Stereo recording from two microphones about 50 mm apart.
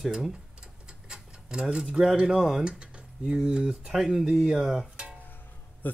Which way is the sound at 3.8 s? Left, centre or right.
Centre.